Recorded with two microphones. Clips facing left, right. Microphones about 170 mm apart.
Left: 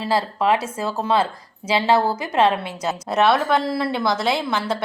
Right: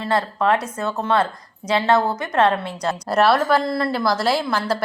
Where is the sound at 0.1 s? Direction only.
30° left (ahead or behind).